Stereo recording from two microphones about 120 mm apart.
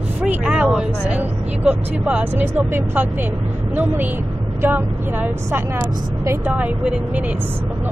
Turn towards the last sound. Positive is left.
turn(degrees=-10)  # may be behind; listen again after turning